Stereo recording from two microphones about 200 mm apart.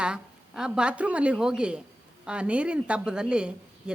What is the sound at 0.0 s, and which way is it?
A woman's voice, 5° right (ahead or behind).